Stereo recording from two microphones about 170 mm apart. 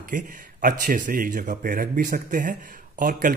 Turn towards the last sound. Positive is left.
turn(degrees=-50)  # may be behind; listen again after turning